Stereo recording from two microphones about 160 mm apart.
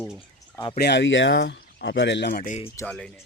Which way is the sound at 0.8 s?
90° left.